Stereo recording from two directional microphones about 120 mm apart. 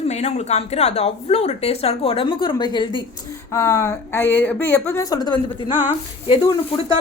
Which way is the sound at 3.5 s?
30° left (ahead or behind).